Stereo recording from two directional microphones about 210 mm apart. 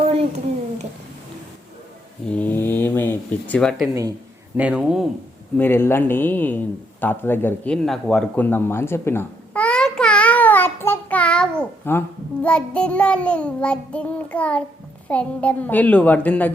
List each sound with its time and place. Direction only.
0.0 s a sound: 30° right (ahead or behind)
2.2 s speech: 5° left (ahead or behind)
5.5 s a man's voice: 10° left (ahead or behind)